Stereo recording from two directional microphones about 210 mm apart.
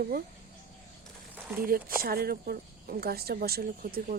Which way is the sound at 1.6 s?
45° right (ahead or behind).